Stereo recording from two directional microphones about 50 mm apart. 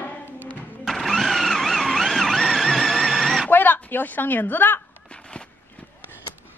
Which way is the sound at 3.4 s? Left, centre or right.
Left.